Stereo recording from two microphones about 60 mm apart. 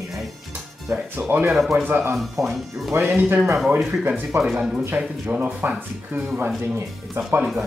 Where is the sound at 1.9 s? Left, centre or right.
Right.